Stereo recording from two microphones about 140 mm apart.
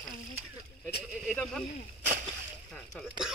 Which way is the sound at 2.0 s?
65° right (ahead or behind).